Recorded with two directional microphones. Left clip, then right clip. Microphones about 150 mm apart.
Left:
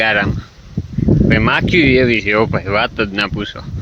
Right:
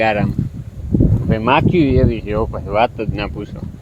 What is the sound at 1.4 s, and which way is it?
Speech, 10° left (ahead or behind).